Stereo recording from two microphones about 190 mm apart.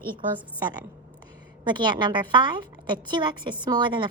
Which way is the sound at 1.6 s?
25° right (ahead or behind).